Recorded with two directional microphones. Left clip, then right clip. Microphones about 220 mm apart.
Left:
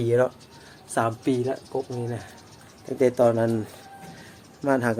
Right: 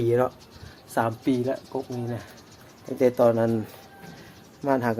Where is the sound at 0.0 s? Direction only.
5° left (ahead or behind).